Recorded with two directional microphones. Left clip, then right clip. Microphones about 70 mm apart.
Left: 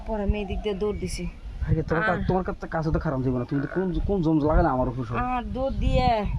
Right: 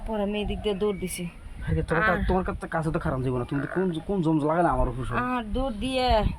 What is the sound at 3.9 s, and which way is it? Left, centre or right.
Speech, left.